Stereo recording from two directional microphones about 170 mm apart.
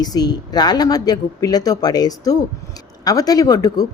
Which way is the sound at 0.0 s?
25° left (ahead or behind).